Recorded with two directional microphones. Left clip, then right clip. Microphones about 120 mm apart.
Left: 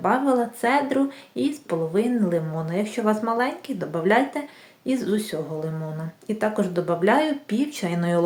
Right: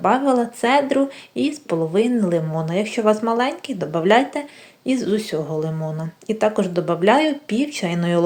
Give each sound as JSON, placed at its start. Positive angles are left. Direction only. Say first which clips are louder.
{"t": 0.0, "sound": "speech", "louder": "right 4 dB", "side_deg": -25}